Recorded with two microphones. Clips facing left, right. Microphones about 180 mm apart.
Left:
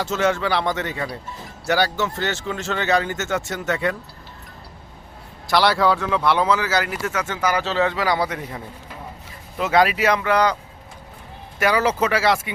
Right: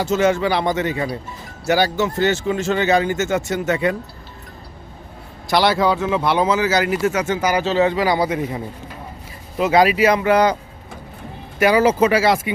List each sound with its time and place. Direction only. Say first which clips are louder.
0.3 s speech: right 3 dB; 15° right (ahead or behind)
5.5 s speech: right 1 dB; 20° right (ahead or behind)
9.7 s speech: right 3 dB; 5° right (ahead or behind)
11.6 s speech: right 5 dB; 15° right (ahead or behind)